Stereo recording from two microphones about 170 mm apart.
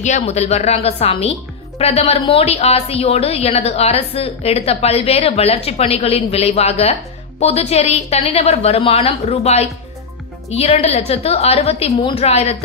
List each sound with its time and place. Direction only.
0.0 s a woman's voice: 40° left (ahead or behind)